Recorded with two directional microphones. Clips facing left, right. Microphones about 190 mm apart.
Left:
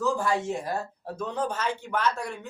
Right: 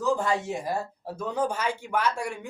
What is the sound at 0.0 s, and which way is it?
A woman's voice, 20° right (ahead or behind).